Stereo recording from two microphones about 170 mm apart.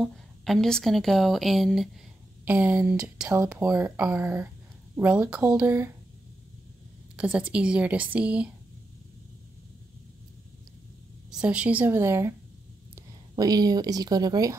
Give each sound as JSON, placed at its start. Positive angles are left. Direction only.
{"t": 0.0, "sound": "a woman's voice", "side_deg": 0}
{"t": 7.2, "sound": "a woman's voice", "side_deg": -5}
{"t": 11.2, "sound": "a woman's voice", "side_deg": -5}